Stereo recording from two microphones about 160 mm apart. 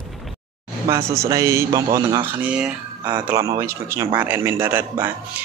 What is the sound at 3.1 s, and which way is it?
A man's voice, 20° right (ahead or behind).